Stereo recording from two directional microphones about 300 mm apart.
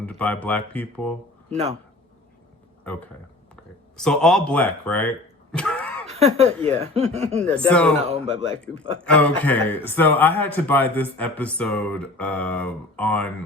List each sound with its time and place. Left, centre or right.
0.0 s mantra: centre
1.5 s speech: right
3.5 s speech: centre
6.1 s speech: right
7.7 s mantra: centre
9.0 s mantra: centre